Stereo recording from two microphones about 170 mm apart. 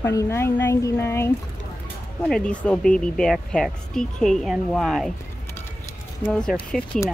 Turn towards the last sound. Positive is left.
turn(degrees=5)  # may be behind; listen again after turning